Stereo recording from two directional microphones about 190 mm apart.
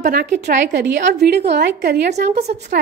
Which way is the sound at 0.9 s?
55° right (ahead or behind).